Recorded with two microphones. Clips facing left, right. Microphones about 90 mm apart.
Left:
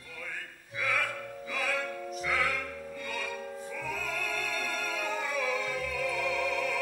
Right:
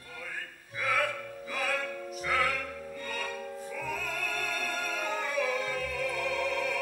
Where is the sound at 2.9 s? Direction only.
40° right (ahead or behind).